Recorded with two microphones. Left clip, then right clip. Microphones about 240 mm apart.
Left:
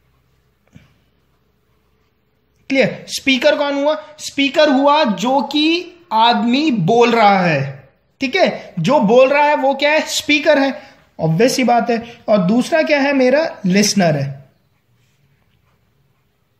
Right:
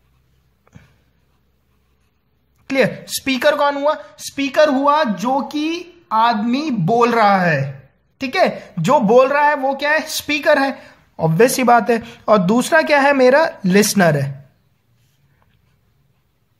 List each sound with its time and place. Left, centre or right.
2.6 s a woman's voice: right